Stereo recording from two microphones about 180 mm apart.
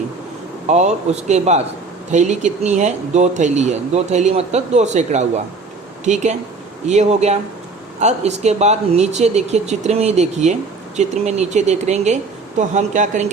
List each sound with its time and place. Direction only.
0.7 s speech: 40° right (ahead or behind)